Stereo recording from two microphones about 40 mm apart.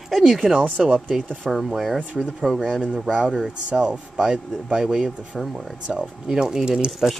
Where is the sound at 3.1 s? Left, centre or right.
Right.